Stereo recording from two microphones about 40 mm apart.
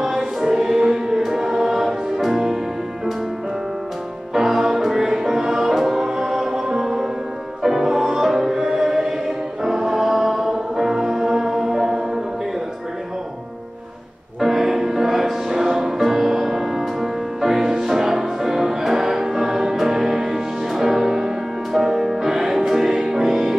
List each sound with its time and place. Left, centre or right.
0.0 s music: centre
4.3 s music: centre
14.4 s music: centre